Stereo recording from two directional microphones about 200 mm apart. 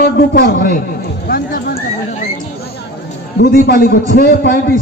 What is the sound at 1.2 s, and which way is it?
Clip-clop, 50° left (ahead or behind).